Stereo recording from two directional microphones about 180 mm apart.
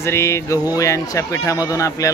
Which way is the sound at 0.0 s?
15° left (ahead or behind).